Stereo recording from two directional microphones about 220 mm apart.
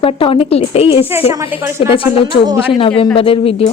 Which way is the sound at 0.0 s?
25° left (ahead or behind).